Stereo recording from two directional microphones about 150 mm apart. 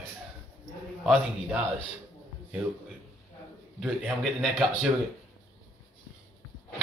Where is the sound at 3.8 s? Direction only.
Centre (ahead or behind).